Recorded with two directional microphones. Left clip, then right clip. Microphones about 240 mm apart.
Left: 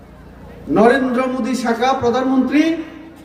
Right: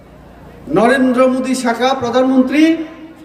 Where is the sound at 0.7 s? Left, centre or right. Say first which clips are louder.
Right 2 dB; centre.